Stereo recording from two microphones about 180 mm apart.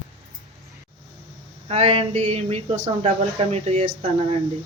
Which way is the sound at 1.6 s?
35° right (ahead or behind).